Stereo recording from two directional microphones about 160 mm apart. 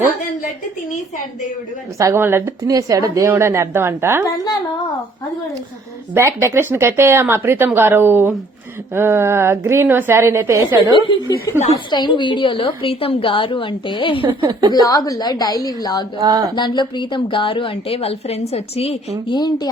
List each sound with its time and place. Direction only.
2.0 s speech: 15° right (ahead or behind)
6.1 s speech: 15° right (ahead or behind)
11.9 s a woman's voice: 30° left (ahead or behind)
14.3 s a woman's voice: 30° right (ahead or behind)
14.7 s a woman's voice: 20° left (ahead or behind)
16.2 s a sound: 25° right (ahead or behind)
16.6 s a woman's voice: 30° left (ahead or behind)